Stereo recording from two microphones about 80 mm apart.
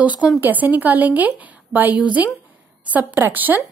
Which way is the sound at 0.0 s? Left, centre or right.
Centre.